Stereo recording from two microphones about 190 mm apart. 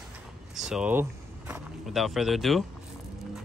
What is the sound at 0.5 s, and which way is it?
Speech, centre (ahead or behind).